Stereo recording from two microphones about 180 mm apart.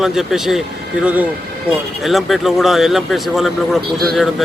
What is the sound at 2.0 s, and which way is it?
Speech, centre (ahead or behind).